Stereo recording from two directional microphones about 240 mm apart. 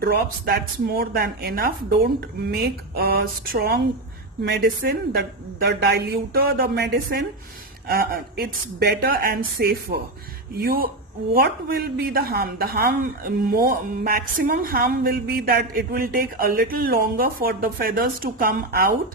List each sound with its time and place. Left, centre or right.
0.0 s speech: right